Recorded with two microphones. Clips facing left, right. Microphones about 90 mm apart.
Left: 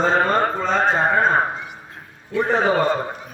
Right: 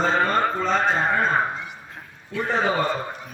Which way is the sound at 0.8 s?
40° left (ahead or behind).